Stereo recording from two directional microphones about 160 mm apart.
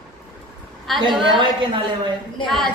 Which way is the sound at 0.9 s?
Centre (ahead or behind).